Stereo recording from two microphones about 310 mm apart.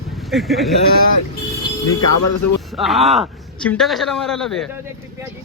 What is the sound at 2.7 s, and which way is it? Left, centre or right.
A man's voice, centre.